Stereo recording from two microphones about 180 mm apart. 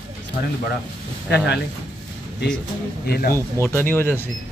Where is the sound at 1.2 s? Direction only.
70° left (ahead or behind).